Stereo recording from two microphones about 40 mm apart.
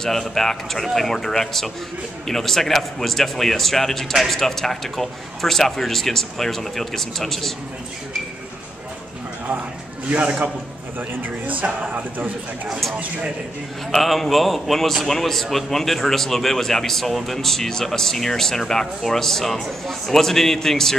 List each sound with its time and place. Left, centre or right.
0.0 s a man's voice: centre
10.0 s a man's voice: right
11.0 s a man's voice: right
13.9 s a man's voice: centre